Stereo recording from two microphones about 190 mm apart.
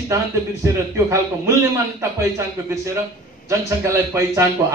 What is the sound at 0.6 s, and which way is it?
A man's voice, 15° right (ahead or behind).